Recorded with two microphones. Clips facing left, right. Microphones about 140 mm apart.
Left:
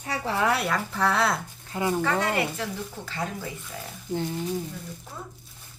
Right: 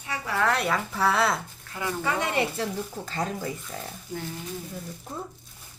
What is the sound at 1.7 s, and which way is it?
Speech, 20° left (ahead or behind).